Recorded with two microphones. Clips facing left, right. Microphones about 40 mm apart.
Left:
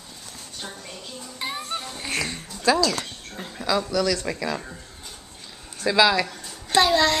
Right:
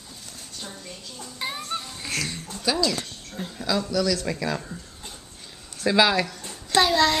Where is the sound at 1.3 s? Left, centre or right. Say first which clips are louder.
Even; centre.